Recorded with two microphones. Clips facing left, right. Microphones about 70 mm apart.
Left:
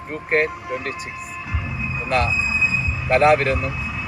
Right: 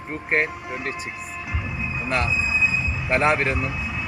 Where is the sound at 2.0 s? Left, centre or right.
Centre.